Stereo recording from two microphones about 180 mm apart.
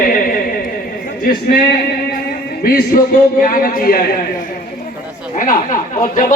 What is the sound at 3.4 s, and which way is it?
Speech, 50° left (ahead or behind).